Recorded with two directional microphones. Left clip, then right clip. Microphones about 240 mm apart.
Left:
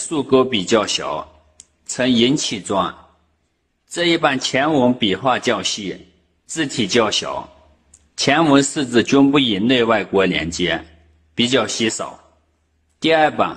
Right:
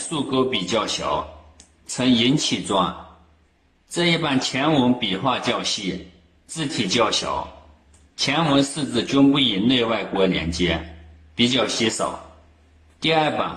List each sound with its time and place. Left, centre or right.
0.1 s speech: left
3.9 s a man's voice: left